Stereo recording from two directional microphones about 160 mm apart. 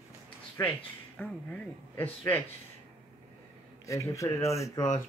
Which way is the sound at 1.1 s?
10° left (ahead or behind).